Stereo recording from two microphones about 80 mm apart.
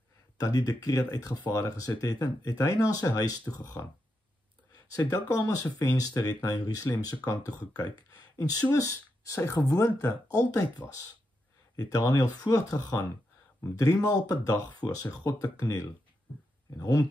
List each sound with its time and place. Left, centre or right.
0.4 s speech: left
4.9 s speech: left
10.8 s speech: left
11.7 s speech: left